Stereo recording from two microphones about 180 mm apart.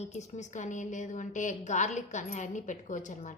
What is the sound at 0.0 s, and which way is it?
A woman's voice, 40° left (ahead or behind).